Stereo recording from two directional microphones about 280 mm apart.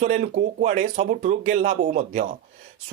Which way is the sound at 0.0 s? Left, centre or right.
Right.